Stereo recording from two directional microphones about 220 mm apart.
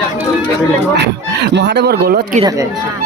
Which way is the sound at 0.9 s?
50° right (ahead or behind).